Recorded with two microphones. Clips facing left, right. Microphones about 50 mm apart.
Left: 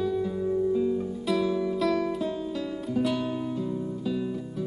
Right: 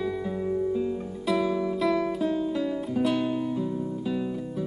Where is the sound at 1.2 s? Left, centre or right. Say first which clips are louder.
Right 2 dB; centre.